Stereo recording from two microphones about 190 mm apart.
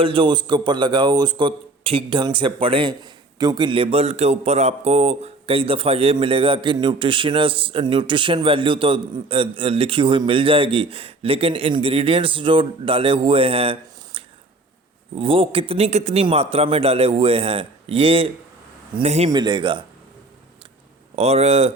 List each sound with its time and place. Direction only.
0.0 s a man's voice: 25° right (ahead or behind)
19.3 s a man's voice: 20° right (ahead or behind)
21.2 s a man's voice: 35° right (ahead or behind)